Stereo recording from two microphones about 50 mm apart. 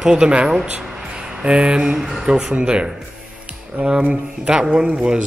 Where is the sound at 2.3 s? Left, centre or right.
Centre.